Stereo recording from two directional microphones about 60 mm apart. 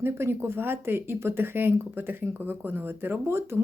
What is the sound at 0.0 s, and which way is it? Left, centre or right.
Speech, right.